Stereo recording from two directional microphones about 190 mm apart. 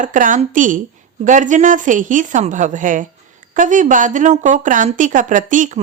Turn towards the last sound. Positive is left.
turn(degrees=-45)  # may be behind; listen again after turning